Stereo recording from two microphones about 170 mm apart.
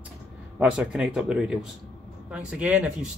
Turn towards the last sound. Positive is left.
turn(degrees=-5)  # may be behind; listen again after turning